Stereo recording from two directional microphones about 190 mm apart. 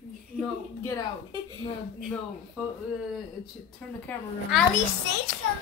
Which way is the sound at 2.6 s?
10° right (ahead or behind).